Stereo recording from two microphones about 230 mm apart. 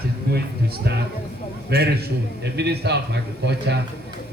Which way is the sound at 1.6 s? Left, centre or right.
Right.